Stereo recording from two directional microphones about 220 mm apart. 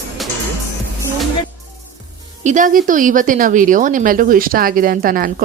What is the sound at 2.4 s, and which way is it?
A woman's voice, 35° right (ahead or behind).